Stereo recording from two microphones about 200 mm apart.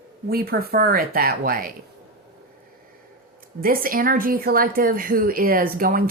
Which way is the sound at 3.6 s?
45° right (ahead or behind).